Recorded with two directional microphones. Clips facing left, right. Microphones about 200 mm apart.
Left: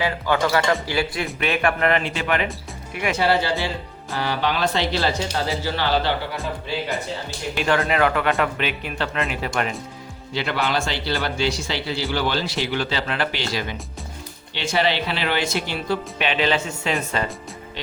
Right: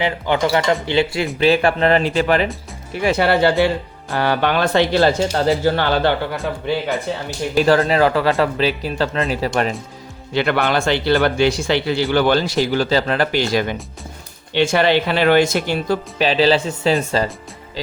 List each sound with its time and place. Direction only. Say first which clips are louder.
0.0 s speech: right 3 dB; 20° right (ahead or behind)
3.2 s speech: right 6 dB; 60° right (ahead or behind)
7.5 s speech: right 7 dB; 35° right (ahead or behind)
10.3 s speech: right 6 dB; 60° right (ahead or behind); by 13.4 s 40° right (ahead or behind)
13.5 s speech: right 8 dB; 55° right (ahead or behind); by 17.2 s 35° right (ahead or behind)